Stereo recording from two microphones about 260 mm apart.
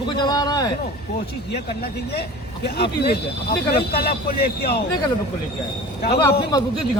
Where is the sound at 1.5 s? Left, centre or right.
Left.